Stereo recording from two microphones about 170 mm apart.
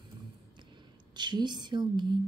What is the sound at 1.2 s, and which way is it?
Speech, 25° right (ahead or behind).